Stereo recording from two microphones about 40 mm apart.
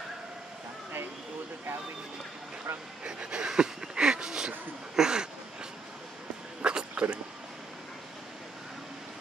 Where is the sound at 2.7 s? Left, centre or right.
Right.